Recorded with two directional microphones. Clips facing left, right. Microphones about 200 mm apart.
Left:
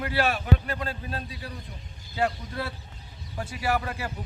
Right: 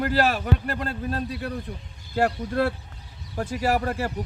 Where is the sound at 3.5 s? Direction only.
40° right (ahead or behind).